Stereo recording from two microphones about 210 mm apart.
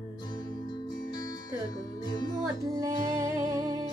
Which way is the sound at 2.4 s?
15° right (ahead or behind).